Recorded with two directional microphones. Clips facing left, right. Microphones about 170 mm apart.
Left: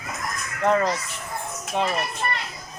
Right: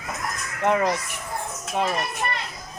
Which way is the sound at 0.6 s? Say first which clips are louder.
Even; 15° right (ahead or behind).